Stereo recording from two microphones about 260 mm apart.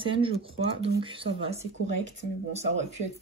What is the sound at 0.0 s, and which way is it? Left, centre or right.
Speech, centre.